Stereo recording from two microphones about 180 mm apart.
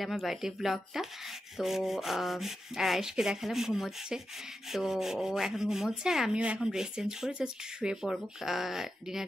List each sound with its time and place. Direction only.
0.0 s rub: centre (ahead or behind)